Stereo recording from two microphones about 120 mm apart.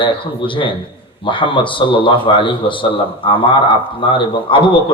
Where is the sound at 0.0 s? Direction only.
45° left (ahead or behind).